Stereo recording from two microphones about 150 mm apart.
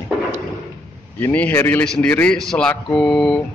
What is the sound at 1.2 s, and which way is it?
Speech, 10° left (ahead or behind).